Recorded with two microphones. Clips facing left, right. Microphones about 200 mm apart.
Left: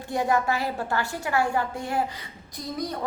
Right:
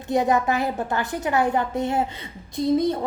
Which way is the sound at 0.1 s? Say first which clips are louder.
Right 4 dB; 20° right (ahead or behind).